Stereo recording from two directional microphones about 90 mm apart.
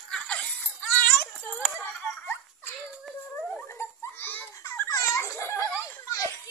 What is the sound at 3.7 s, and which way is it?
Baby laughter, 30° left (ahead or behind).